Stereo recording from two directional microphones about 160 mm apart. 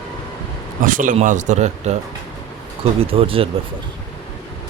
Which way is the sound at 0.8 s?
55° right (ahead or behind).